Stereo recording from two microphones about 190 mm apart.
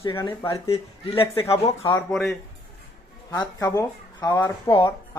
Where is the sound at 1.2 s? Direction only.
30° left (ahead or behind).